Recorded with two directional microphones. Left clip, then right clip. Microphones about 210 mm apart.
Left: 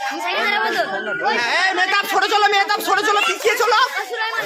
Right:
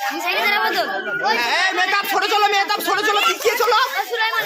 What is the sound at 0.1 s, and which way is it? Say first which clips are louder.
Chatter: right 1 dB; 25° right (ahead or behind).